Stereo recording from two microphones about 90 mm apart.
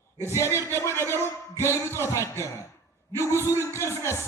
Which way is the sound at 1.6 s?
30° left (ahead or behind).